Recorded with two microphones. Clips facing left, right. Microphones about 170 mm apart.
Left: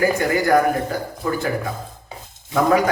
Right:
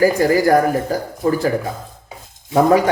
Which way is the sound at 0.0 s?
35° right (ahead or behind).